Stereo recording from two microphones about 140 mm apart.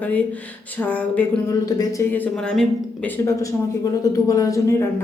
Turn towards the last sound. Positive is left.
turn(degrees=20)  # may be behind; listen again after turning